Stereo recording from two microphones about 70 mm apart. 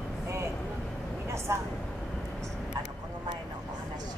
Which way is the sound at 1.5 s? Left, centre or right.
Right.